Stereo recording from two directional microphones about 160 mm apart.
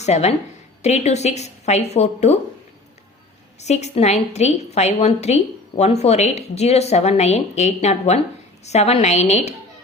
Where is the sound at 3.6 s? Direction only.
45° left (ahead or behind).